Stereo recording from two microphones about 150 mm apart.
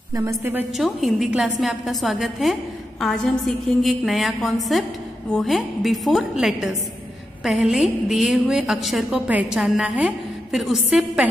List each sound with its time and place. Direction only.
0.1 s a woman's voice: 20° right (ahead or behind)
0.7 s a woman's voice: centre (ahead or behind)